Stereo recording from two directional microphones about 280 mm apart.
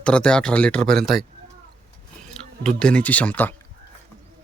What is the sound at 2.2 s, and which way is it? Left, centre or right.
Speech, centre.